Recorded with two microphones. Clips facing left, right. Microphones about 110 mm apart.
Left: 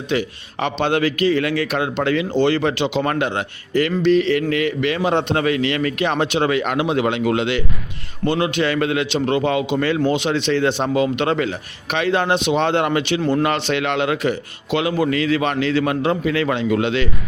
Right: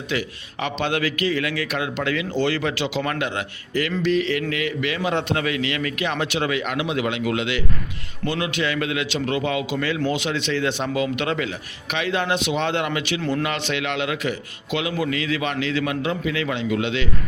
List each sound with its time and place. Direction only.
0.1 s a man's voice: 30° left (ahead or behind)
3.0 s a man's voice: 35° left (ahead or behind)